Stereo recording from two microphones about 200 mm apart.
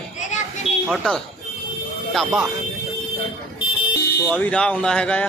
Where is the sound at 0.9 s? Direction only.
5° left (ahead or behind).